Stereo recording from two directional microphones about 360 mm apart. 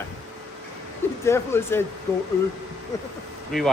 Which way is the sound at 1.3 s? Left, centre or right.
Centre.